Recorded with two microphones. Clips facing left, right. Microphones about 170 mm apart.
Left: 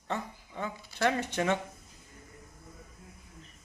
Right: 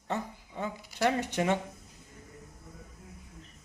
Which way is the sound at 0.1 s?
15° right (ahead or behind).